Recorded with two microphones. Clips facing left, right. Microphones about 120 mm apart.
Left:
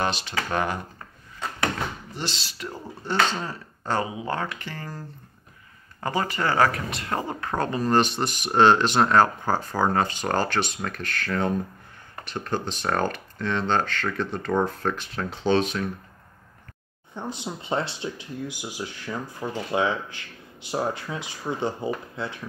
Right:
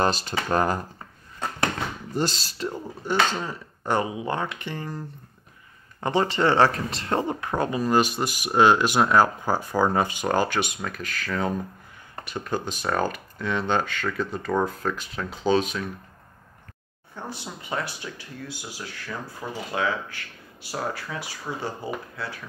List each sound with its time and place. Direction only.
0.0 s speech: 40° right (ahead or behind)
2.1 s speech: 40° right (ahead or behind)
2.7 s speech: 15° right (ahead or behind)
6.0 s speech: 25° right (ahead or behind)
7.3 s speech: 15° right (ahead or behind)
17.1 s speech: 20° left (ahead or behind)